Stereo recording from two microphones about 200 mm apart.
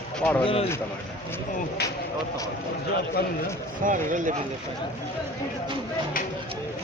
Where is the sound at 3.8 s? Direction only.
40° right (ahead or behind).